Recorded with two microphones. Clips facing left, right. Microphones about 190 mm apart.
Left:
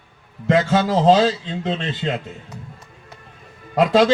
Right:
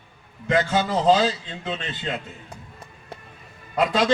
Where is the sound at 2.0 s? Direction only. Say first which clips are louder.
Left 5 dB; 80° left.